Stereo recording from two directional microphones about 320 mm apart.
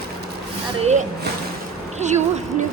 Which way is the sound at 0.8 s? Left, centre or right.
Right.